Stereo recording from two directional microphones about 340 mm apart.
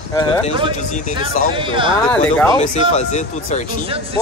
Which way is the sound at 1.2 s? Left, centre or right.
Centre.